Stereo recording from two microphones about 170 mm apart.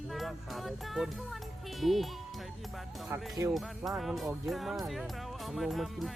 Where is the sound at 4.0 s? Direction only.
Centre (ahead or behind).